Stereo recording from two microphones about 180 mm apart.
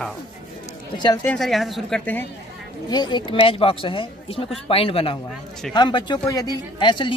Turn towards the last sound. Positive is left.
turn(degrees=25)  # may be behind; listen again after turning